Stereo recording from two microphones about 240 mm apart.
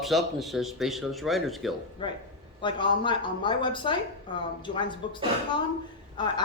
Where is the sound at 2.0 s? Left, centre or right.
Centre.